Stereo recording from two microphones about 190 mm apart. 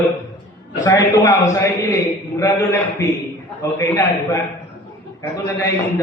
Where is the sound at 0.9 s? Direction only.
15° left (ahead or behind).